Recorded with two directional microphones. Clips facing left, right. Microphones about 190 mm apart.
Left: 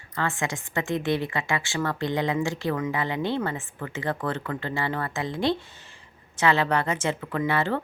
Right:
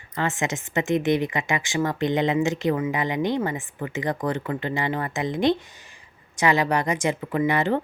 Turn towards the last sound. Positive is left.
turn(degrees=-15)  # may be behind; listen again after turning